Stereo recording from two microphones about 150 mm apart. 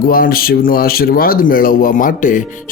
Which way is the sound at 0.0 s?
75° left (ahead or behind).